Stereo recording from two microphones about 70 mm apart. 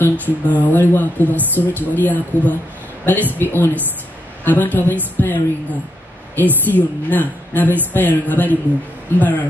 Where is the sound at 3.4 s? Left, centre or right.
Left.